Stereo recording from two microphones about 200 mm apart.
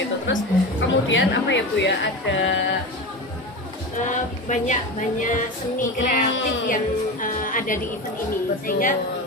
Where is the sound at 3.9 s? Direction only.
40° left (ahead or behind).